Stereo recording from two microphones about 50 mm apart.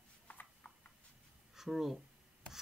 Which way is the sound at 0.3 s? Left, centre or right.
Left.